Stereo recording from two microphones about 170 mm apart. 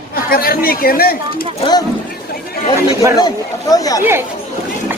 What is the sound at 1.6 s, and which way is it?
Speech, 25° left (ahead or behind).